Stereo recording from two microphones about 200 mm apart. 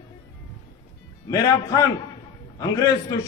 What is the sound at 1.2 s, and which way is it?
A man's voice, 15° left (ahead or behind).